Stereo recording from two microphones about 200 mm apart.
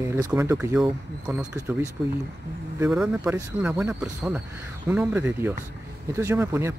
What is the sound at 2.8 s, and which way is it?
Speech, 5° right (ahead or behind).